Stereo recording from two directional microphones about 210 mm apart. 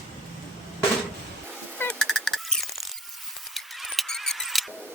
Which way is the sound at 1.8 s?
5° left (ahead or behind).